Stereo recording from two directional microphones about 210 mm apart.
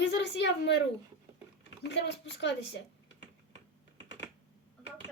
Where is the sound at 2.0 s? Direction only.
55° left (ahead or behind).